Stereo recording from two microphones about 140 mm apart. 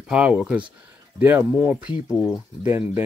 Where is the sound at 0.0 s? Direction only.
10° right (ahead or behind).